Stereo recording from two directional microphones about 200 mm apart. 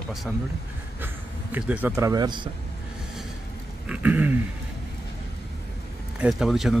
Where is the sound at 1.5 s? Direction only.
10° right (ahead or behind).